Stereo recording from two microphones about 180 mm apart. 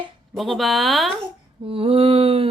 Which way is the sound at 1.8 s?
30° right (ahead or behind).